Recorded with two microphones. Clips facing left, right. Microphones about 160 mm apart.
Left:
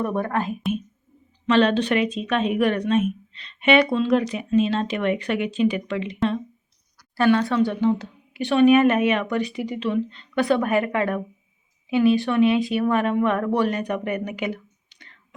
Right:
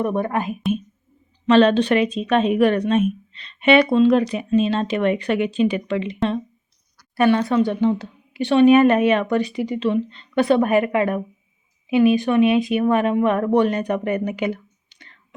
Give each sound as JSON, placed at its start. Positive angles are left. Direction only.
{"t": 0.0, "sound": "speech", "side_deg": -15}
{"t": 1.5, "sound": "a woman's voice", "side_deg": -35}
{"t": 7.5, "sound": "speech", "side_deg": -20}
{"t": 8.7, "sound": "a woman's voice", "side_deg": -40}